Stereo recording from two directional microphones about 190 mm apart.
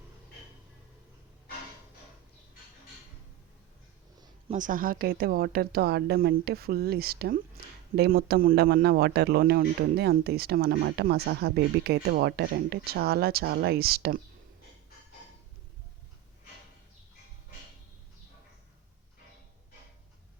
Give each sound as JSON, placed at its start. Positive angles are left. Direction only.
{"t": 4.5, "sound": "a man's voice", "side_deg": -45}